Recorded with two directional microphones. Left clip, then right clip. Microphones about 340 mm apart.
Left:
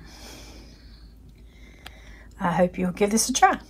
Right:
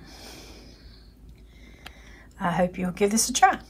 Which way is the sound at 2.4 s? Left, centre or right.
Centre.